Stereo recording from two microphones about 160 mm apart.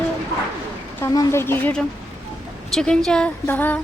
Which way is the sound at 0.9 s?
20° left (ahead or behind).